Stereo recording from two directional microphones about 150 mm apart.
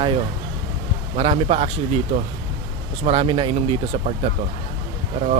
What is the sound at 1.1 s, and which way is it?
Speech, 40° right (ahead or behind).